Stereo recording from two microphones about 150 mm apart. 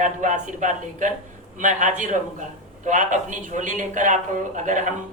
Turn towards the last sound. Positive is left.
turn(degrees=-55)  # may be behind; listen again after turning